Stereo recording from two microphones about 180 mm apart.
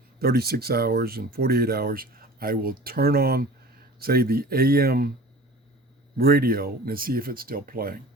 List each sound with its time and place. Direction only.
0.2 s speech: 60° right (ahead or behind)
6.1 s speech: 60° right (ahead or behind)